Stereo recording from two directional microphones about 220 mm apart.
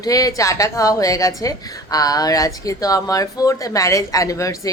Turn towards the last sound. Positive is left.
turn(degrees=15)  # may be behind; listen again after turning